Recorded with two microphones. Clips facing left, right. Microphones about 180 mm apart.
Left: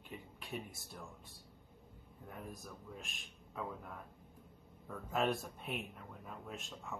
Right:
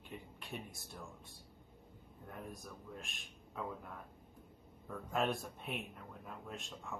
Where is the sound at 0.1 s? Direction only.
Centre (ahead or behind).